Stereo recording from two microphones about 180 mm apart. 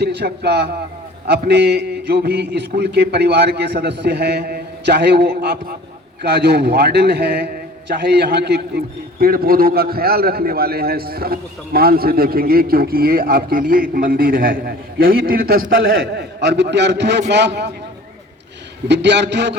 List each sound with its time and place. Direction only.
0.0 s a man's voice: 70° right (ahead or behind)
15.7 s a man's voice: 80° right
18.9 s a man's voice: 70° right (ahead or behind)